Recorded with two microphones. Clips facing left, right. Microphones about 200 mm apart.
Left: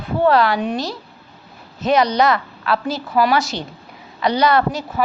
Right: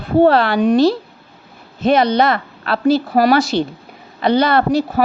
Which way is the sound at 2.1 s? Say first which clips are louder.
Right 2 dB; 55° right (ahead or behind).